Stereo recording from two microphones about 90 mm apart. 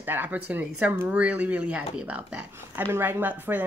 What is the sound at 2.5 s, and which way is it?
Speech, 25° right (ahead or behind).